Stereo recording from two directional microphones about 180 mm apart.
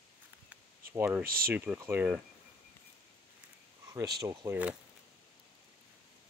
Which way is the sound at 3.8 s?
15° right (ahead or behind).